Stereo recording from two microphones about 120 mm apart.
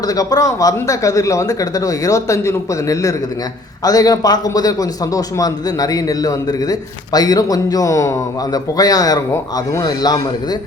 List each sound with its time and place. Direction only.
0.1 s a man's voice: 30° left (ahead or behind)